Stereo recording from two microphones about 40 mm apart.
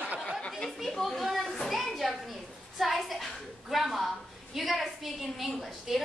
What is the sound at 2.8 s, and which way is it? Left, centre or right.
A woman's voice, centre.